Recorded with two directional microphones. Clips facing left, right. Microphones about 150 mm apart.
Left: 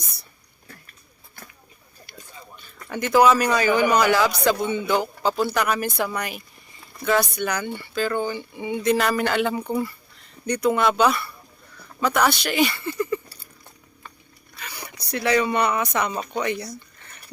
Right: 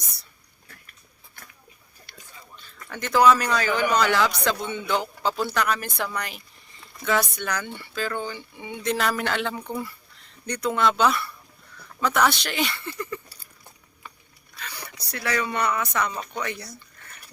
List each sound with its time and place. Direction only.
2.1 s whispering: 10° left (ahead or behind)
2.6 s a man's voice: 15° left (ahead or behind)
14.6 s a sound: 10° left (ahead or behind)
15.1 s speech: 20° left (ahead or behind)